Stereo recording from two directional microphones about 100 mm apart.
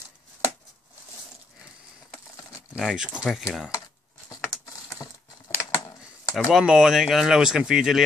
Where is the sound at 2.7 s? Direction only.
5° right (ahead or behind).